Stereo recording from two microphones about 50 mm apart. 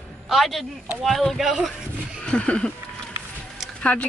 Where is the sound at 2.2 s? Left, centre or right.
Left.